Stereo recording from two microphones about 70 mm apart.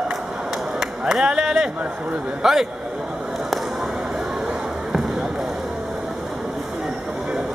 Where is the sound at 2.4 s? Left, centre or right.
Centre.